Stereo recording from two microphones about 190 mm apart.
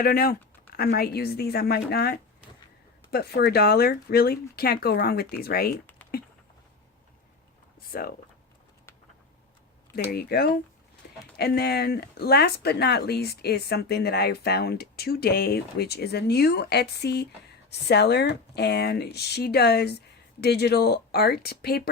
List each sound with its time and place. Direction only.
0.0 s speech: 50° left (ahead or behind)
7.9 s speech: 50° left (ahead or behind)
9.9 s speech: 55° left (ahead or behind)
11.0 s a sound: 55° left (ahead or behind)
11.3 s speech: 60° left (ahead or behind)